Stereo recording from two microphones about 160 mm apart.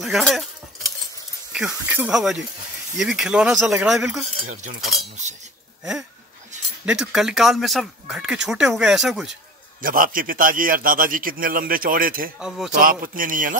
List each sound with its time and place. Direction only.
0.0 s speech: centre (ahead or behind)
1.5 s speech: 10° right (ahead or behind)
6.9 s speech: 5° right (ahead or behind)
9.8 s a man's voice: 60° right (ahead or behind)
12.4 s speech: 5° right (ahead or behind)
12.8 s a man's voice: 60° right (ahead or behind)